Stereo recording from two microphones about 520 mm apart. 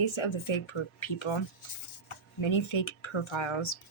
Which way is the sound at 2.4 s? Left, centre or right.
Left.